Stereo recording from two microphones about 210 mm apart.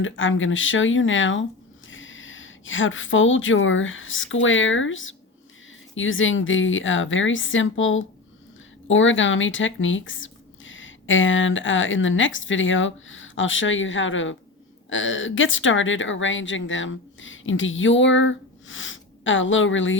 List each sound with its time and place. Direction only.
0.0 s a woman's voice: 65° left (ahead or behind)